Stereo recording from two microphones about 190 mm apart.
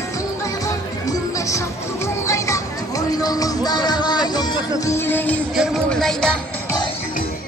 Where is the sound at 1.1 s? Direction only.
15° left (ahead or behind).